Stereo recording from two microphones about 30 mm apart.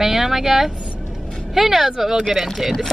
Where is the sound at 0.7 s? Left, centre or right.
Right.